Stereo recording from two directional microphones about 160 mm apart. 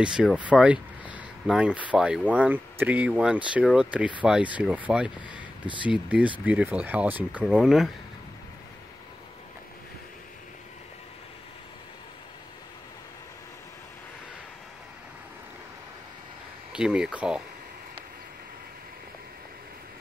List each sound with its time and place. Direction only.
0.0 s speech: 5° right (ahead or behind)
16.7 s speech: 5° right (ahead or behind)